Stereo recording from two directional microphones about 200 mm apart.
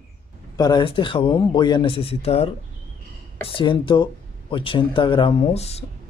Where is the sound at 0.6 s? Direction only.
20° left (ahead or behind).